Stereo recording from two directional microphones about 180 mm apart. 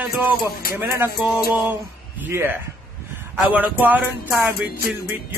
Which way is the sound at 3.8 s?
10° right (ahead or behind).